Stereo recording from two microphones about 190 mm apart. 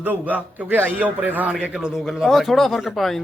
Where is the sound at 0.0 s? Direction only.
10° right (ahead or behind).